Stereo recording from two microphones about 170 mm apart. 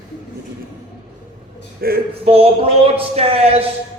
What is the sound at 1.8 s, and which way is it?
Speech, 60° right (ahead or behind).